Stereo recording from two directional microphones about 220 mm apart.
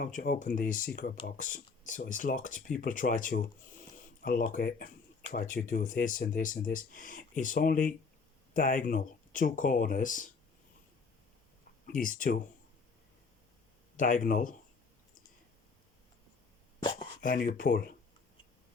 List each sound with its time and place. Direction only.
0.0 s speech: 35° left (ahead or behind)
11.9 s speech: 40° left (ahead or behind)
13.9 s speech: 35° left (ahead or behind)
17.2 s speech: 40° left (ahead or behind)